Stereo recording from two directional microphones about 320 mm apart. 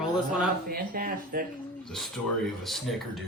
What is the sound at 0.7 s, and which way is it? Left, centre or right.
Speech, right.